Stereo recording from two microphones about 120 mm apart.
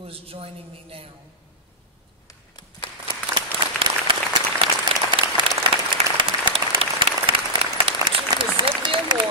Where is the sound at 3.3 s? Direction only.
45° right (ahead or behind).